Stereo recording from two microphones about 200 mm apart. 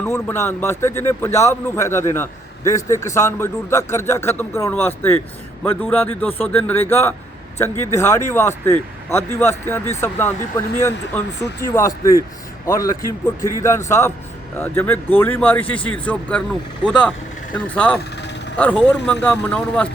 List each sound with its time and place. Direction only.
0.0 s a man's voice: 10° left (ahead or behind)
11.6 s a man's voice: 15° left (ahead or behind)